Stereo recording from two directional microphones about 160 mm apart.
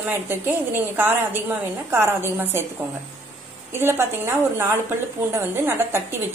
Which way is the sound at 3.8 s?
15° right (ahead or behind).